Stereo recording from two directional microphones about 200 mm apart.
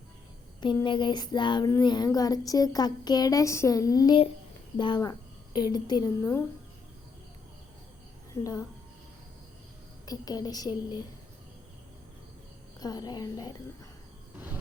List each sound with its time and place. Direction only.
0.6 s child singing: 25° left (ahead or behind)
8.3 s a woman's voice: 15° left (ahead or behind)
10.1 s child singing: 20° left (ahead or behind)
12.8 s child singing: 20° left (ahead or behind)